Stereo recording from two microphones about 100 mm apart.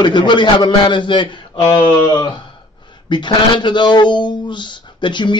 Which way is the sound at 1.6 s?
25° left (ahead or behind).